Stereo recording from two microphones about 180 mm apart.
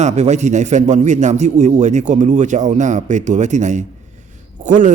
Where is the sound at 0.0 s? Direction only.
40° right (ahead or behind).